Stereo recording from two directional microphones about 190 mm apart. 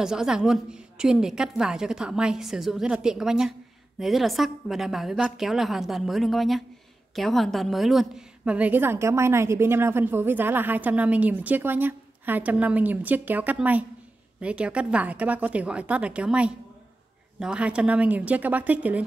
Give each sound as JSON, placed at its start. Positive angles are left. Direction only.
{"t": 0.0, "sound": "a woman's voice", "side_deg": -5}